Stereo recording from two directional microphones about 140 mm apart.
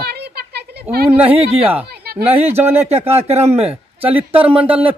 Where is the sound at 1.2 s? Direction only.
45° right (ahead or behind).